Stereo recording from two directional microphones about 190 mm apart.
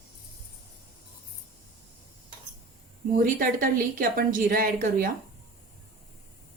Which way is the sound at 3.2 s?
50° right (ahead or behind).